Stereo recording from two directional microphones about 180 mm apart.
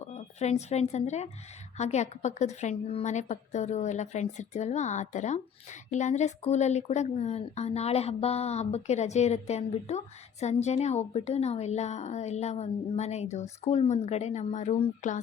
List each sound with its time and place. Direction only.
0.0 s speech: 35° left (ahead or behind)